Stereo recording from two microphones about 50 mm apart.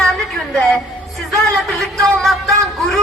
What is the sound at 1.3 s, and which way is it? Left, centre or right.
A man's voice, centre.